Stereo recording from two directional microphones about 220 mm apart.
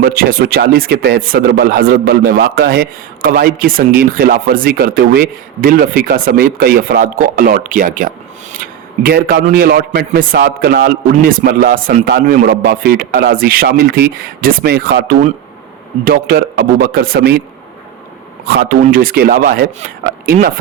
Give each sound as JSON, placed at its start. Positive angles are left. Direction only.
{"t": 0.0, "sound": "a man's voice", "side_deg": -40}
{"t": 18.4, "sound": "a man's voice", "side_deg": -45}